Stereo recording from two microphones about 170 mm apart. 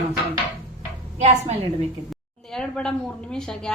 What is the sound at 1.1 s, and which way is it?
Speech, 40° right (ahead or behind).